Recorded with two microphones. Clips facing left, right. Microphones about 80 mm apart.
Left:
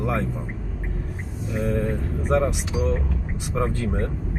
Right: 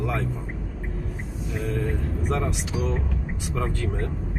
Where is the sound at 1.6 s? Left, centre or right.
Left.